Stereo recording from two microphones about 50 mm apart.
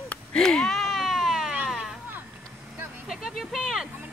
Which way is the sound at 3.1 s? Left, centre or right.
Centre.